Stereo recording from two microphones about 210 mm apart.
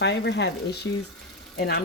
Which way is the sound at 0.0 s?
55° left (ahead or behind).